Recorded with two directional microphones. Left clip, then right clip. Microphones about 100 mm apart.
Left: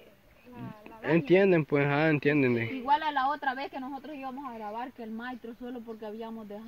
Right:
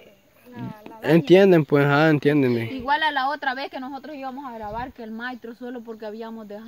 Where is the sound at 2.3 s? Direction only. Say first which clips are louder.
Right 6 dB; 70° right (ahead or behind).